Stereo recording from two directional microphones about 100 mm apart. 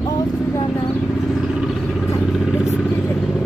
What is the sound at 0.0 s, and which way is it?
Vehicle, 35° left (ahead or behind).